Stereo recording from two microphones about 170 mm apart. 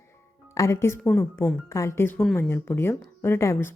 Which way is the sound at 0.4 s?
15° left (ahead or behind).